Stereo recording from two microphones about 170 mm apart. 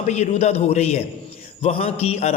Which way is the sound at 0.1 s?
40° left (ahead or behind).